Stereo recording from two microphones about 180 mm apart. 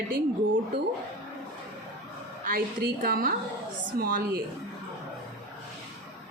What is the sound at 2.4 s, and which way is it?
A woman's voice, 55° right (ahead or behind).